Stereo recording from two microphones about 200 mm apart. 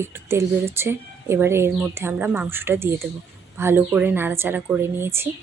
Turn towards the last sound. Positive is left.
turn(degrees=-10)  # may be behind; listen again after turning